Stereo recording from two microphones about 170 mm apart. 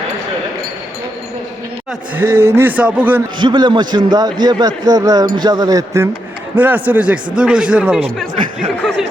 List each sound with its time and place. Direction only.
2.1 s speech: 15° right (ahead or behind)
3.3 s a man's voice: 25° right (ahead or behind); by 8.0 s 5° right (ahead or behind)
8.8 s speech: 5° left (ahead or behind)